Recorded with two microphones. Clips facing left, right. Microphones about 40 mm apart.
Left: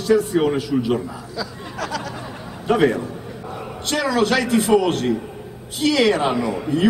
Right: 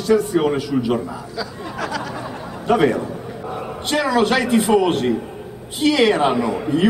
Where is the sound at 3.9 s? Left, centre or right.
Right.